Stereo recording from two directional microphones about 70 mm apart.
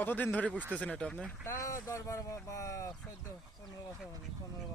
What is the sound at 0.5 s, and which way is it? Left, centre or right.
Speech, right.